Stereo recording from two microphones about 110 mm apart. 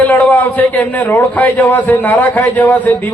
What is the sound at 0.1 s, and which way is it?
A man's voice, 15° left (ahead or behind).